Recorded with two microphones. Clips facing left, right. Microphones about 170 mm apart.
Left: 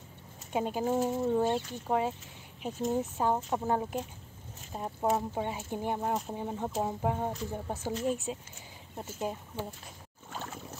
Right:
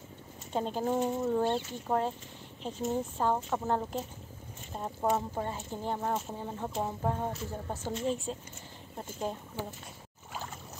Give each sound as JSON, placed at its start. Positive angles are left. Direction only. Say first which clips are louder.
{"t": 0.5, "sound": "speech", "louder": "left 1 dB", "side_deg": 10}
{"t": 10.3, "sound": "rowboat", "louder": "left 1 dB", "side_deg": 0}